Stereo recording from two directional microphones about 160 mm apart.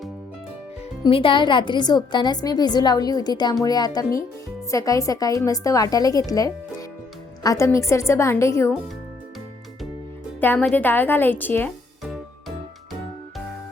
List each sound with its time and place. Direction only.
1.0 s a woman's voice: 30° left (ahead or behind)
10.4 s a woman's voice: 10° left (ahead or behind)